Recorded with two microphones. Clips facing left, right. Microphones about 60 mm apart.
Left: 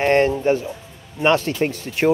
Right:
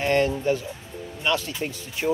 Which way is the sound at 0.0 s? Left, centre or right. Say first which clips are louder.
Left 5 dB; left.